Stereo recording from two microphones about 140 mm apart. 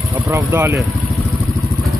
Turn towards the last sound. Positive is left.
turn(degrees=-20)  # may be behind; listen again after turning